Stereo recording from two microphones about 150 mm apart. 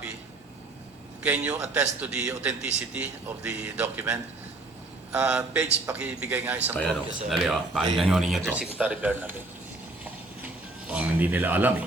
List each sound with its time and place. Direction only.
1.2 s a man's voice: 10° right (ahead or behind)
6.7 s a man's voice: 5° left (ahead or behind)
10.0 s a sound: 10° right (ahead or behind)